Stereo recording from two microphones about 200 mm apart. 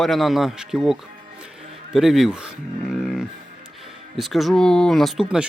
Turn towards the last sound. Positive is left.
turn(degrees=-5)  # may be behind; listen again after turning